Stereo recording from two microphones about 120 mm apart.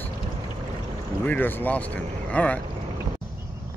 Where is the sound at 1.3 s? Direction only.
15° left (ahead or behind).